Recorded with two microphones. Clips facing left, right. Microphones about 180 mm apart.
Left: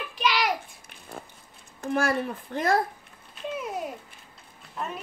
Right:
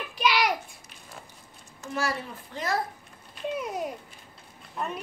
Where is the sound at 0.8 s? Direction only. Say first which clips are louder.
Left 5 dB; 55° left (ahead or behind).